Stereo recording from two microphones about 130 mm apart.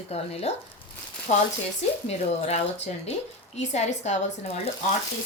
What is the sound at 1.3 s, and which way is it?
Speech, 65° left (ahead or behind).